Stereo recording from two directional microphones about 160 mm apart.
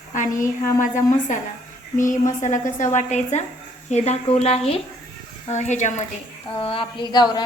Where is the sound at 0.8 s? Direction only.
50° left (ahead or behind).